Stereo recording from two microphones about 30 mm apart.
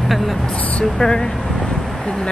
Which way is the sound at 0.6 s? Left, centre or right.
Left.